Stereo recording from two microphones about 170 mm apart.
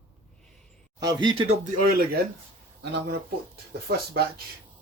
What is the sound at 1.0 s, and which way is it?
Speech, 25° right (ahead or behind).